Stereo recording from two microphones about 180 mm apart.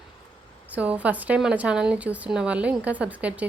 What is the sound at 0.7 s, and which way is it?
A woman's voice, 10° right (ahead or behind).